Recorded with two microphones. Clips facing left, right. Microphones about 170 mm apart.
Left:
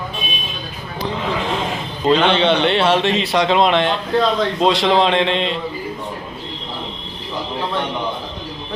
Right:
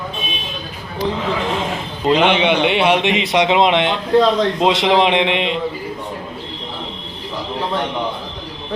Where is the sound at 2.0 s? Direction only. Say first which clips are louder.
Even; 15° right (ahead or behind).